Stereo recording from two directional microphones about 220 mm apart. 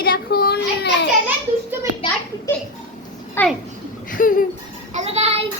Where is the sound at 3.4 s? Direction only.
10° left (ahead or behind).